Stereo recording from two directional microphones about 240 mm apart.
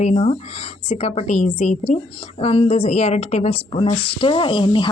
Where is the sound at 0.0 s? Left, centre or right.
Left.